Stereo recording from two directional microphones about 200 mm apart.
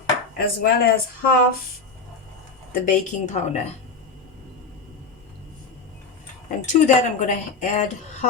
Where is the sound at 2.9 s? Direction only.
35° left (ahead or behind).